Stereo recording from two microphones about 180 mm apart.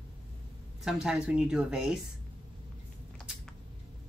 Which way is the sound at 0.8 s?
5° right (ahead or behind).